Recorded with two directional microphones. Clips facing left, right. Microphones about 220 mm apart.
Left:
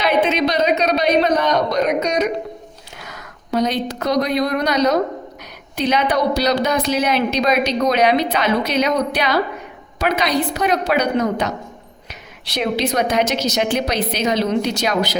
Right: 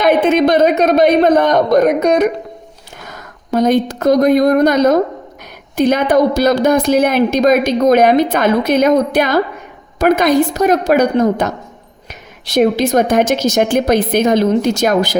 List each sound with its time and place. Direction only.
0.0 s a woman's voice: 50° right (ahead or behind)